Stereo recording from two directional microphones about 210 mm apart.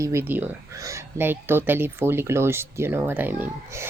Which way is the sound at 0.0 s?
10° right (ahead or behind).